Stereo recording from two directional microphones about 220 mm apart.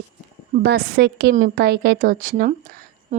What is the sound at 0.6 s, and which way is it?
A woman's voice, 45° right (ahead or behind).